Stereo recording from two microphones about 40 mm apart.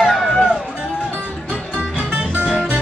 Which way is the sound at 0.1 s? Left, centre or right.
Centre.